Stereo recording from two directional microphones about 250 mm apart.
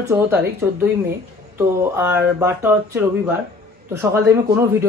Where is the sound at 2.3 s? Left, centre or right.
Centre.